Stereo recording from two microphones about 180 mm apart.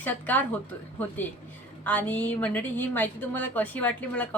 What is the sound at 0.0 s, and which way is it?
A woman's voice, 10° left (ahead or behind).